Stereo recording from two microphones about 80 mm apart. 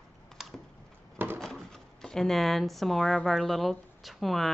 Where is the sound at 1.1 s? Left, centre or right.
Right.